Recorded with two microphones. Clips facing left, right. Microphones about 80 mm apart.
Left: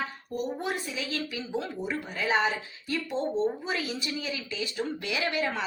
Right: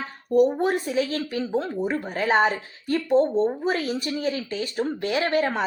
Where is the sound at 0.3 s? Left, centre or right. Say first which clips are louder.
Right 14 dB; right.